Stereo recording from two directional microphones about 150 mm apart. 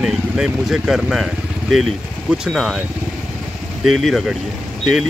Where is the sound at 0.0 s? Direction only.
5° right (ahead or behind).